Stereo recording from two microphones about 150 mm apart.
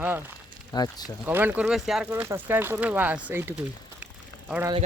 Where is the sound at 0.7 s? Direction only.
25° left (ahead or behind).